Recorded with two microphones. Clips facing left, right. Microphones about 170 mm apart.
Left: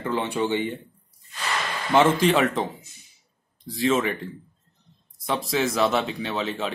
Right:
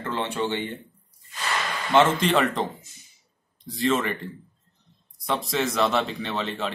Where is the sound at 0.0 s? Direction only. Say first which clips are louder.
Left 2 dB; 10° left (ahead or behind).